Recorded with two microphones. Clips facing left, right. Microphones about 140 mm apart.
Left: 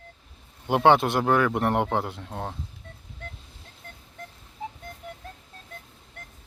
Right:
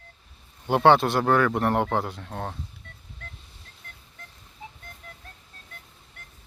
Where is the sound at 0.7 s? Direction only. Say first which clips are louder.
Right 1 dB; 15° left (ahead or behind).